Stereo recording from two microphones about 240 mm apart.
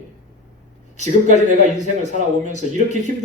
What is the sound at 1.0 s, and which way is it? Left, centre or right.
Speech, right.